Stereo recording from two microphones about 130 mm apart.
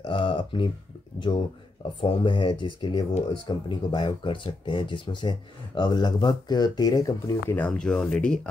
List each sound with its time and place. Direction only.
0.0 s a sound: 40° left (ahead or behind)
2.0 s speech: 40° left (ahead or behind)
7.5 s speech: 10° left (ahead or behind)